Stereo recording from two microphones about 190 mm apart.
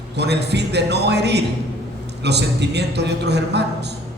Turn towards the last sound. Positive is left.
turn(degrees=-60)  # may be behind; listen again after turning